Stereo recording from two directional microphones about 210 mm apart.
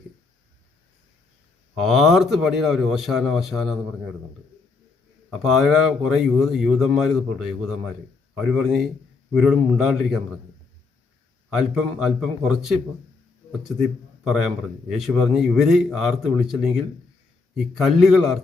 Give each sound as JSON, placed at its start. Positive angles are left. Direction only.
{"t": 1.7, "sound": "a man's voice", "side_deg": 0}
{"t": 5.3, "sound": "a man's voice", "side_deg": 0}
{"t": 11.4, "sound": "a man's voice", "side_deg": 0}